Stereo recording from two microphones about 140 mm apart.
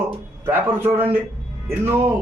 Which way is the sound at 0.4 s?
15° right (ahead or behind).